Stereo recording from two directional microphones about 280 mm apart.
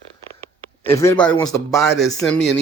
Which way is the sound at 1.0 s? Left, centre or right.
Centre.